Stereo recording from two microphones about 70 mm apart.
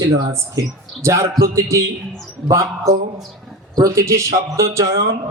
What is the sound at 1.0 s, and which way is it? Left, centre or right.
A man's voice, right.